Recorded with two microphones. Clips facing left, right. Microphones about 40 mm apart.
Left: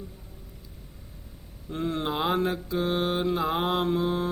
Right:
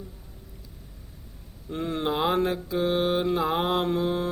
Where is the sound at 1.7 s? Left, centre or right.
Centre.